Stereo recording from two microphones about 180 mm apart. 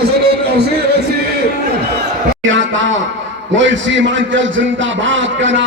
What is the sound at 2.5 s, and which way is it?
A man's voice, 90° right.